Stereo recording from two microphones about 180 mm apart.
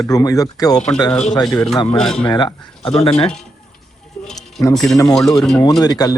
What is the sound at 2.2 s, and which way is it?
Speech, 25° left (ahead or behind).